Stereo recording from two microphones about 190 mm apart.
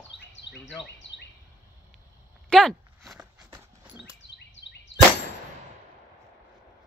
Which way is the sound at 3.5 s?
10° right (ahead or behind).